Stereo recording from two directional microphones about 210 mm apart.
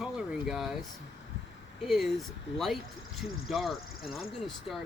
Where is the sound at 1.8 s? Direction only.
Centre (ahead or behind).